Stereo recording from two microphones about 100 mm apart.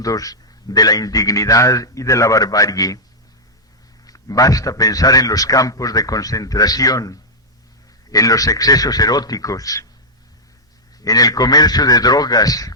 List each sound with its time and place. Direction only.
0.0 s a man's voice: 35° left (ahead or behind)
4.0 s a man's voice: 40° left (ahead or behind)
11.0 s a man's voice: 40° left (ahead or behind)